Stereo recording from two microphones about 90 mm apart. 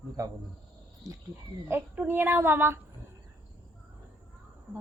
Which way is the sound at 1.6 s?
20° right (ahead or behind).